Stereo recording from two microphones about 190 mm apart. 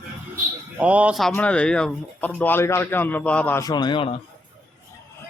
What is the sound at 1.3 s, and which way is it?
Speech, 5° left (ahead or behind).